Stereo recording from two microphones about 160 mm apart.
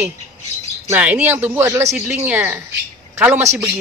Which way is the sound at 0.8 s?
10° right (ahead or behind).